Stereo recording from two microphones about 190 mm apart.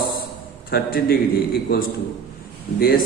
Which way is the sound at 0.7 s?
55° left (ahead or behind).